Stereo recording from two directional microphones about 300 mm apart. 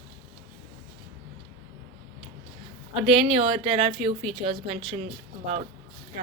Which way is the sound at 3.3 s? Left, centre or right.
Centre.